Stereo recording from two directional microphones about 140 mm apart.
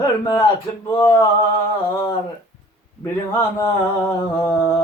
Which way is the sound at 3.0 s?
25° left (ahead or behind).